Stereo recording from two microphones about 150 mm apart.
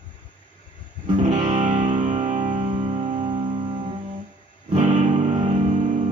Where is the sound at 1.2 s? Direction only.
50° right (ahead or behind).